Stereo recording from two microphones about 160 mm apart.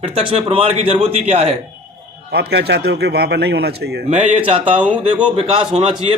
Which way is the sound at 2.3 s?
90° right.